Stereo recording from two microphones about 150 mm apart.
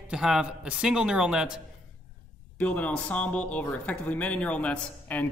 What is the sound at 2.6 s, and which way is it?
Speech, 10° left (ahead or behind).